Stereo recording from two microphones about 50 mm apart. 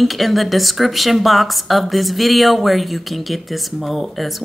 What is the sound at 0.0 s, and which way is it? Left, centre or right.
A woman's voice, centre.